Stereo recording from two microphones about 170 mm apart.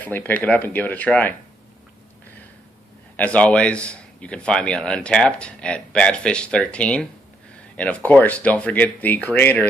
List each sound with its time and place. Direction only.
0.0 s a man's voice: 10° left (ahead or behind)
3.2 s a man's voice: 10° left (ahead or behind)